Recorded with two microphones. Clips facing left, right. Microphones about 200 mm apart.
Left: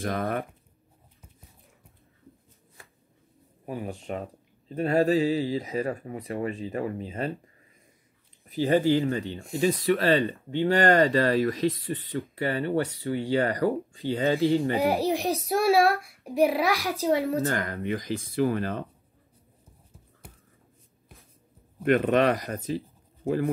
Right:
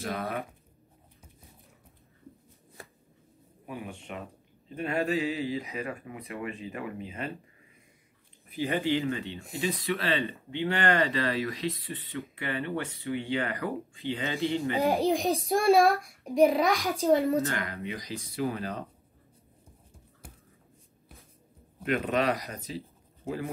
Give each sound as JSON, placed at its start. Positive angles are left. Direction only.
{"t": 0.0, "sound": "speech", "side_deg": 50}
{"t": 3.6, "sound": "speech", "side_deg": 35}
{"t": 8.5, "sound": "speech", "side_deg": 35}
{"t": 14.9, "sound": "a child's voice", "side_deg": 5}
{"t": 17.5, "sound": "speech", "side_deg": 50}
{"t": 21.8, "sound": "speech", "side_deg": 55}
{"t": 22.7, "sound": "a sound", "side_deg": 50}